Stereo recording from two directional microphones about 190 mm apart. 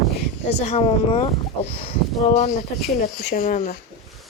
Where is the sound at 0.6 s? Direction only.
35° left (ahead or behind).